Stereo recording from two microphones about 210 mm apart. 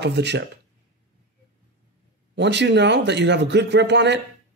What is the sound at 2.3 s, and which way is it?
A man's voice, 55° right (ahead or behind).